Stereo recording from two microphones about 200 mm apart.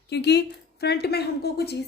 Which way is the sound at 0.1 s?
55° left (ahead or behind).